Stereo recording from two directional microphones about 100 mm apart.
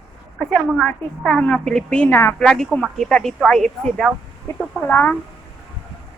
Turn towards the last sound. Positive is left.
turn(degrees=15)  # may be behind; listen again after turning